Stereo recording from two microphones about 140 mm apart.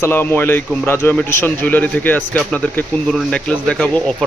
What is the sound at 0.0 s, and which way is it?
A man's voice, 15° left (ahead or behind).